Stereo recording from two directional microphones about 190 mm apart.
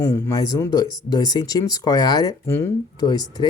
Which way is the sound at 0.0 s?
15° left (ahead or behind).